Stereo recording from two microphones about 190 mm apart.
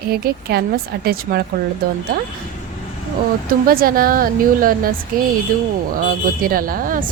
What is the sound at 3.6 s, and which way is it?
Speech, 50° right (ahead or behind).